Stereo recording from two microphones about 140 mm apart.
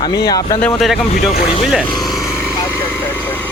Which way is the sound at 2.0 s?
Centre (ahead or behind).